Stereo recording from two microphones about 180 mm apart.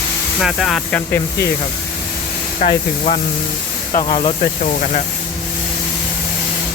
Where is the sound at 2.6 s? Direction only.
45° left (ahead or behind).